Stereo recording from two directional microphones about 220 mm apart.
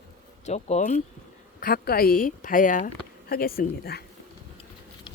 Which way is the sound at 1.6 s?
45° left (ahead or behind).